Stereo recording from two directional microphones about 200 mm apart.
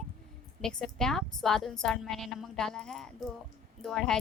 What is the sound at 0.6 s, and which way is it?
A woman's voice, 5° left (ahead or behind).